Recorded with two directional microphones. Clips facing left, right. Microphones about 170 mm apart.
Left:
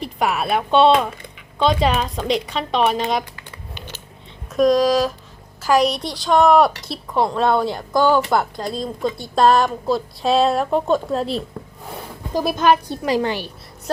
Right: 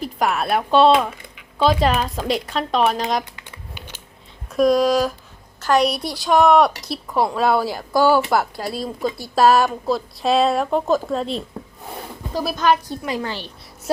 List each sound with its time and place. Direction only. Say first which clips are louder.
0.0 s speech: even; centre (ahead or behind)
4.5 s speech: left 1 dB; 5° right (ahead or behind)
12.3 s a woman's voice: left 2 dB; 20° left (ahead or behind)